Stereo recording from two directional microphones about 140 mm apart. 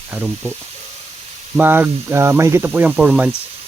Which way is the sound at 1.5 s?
15° right (ahead or behind).